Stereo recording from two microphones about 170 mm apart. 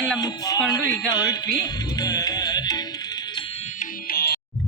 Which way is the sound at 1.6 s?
25° left (ahead or behind).